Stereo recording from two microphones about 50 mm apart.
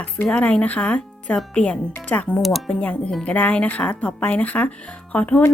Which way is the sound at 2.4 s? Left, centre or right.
Centre.